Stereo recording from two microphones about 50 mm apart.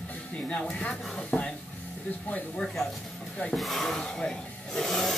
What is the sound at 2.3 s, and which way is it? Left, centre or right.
Speech, left.